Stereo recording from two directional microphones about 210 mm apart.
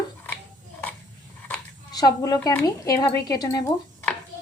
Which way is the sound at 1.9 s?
20° left (ahead or behind).